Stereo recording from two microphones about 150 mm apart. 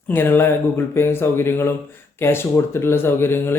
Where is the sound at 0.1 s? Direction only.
15° left (ahead or behind).